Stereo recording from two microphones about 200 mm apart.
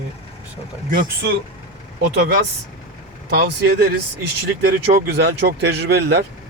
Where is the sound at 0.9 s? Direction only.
45° right (ahead or behind).